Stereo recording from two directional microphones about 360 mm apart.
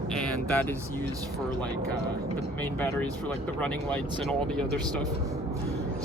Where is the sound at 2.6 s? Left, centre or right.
Centre.